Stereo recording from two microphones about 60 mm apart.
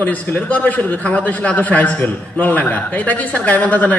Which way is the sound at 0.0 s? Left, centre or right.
Left.